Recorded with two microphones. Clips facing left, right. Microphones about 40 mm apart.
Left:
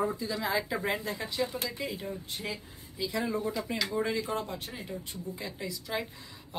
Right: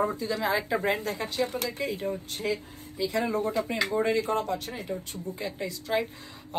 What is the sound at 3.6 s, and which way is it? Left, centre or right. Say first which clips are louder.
Speech: right 4 dB; right.